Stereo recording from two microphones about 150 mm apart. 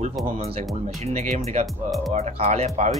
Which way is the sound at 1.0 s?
50° right (ahead or behind).